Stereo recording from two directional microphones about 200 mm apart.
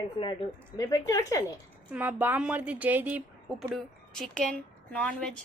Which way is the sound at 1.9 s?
5° right (ahead or behind).